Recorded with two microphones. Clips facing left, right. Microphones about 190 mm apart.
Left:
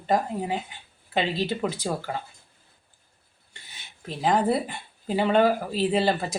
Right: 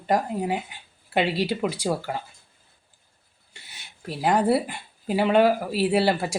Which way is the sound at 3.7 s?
10° right (ahead or behind).